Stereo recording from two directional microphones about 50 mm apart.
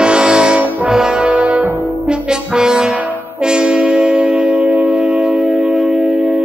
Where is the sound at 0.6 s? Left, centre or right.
Right.